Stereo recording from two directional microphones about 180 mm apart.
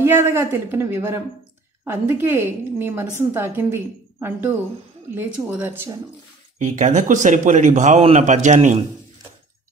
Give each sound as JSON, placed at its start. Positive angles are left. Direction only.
{"t": 0.0, "sound": "a woman's voice", "side_deg": -15}
{"t": 6.6, "sound": "a man's voice", "side_deg": -45}